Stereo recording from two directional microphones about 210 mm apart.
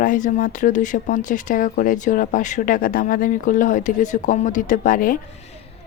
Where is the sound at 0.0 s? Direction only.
40° left (ahead or behind).